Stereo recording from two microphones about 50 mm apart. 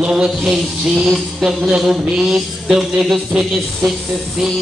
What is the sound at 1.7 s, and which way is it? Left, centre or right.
Mantra, centre.